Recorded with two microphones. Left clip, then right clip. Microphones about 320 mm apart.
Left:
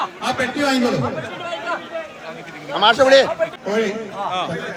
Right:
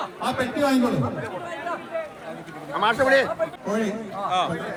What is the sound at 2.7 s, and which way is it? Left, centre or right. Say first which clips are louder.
Speech: left 7 dB; left.